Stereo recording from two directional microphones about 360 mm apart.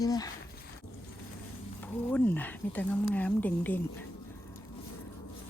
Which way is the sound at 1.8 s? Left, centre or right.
Centre.